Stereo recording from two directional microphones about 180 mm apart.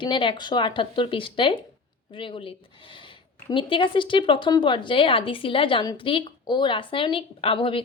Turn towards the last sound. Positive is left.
turn(degrees=30)  # may be behind; listen again after turning